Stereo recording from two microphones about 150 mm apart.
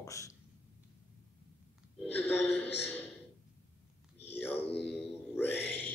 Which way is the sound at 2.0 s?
10° left (ahead or behind).